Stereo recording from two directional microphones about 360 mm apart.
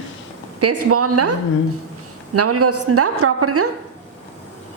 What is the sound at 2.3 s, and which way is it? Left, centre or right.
A woman's voice, right.